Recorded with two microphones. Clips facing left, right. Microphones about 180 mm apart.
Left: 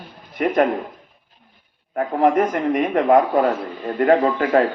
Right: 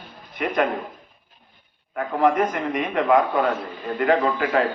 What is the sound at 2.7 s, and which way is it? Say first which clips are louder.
A man's voice: left 4 dB; 40° left (ahead or behind).